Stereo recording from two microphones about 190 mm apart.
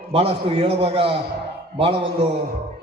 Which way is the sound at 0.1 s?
30° right (ahead or behind).